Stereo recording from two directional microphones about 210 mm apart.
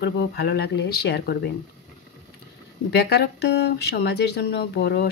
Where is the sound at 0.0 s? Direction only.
50° left (ahead or behind).